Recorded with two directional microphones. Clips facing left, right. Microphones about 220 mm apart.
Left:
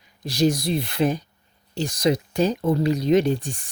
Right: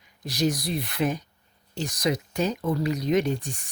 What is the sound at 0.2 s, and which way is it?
Speech, 30° left (ahead or behind).